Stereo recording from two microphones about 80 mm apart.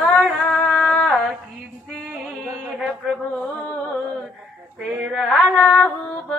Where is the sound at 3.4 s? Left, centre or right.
Centre.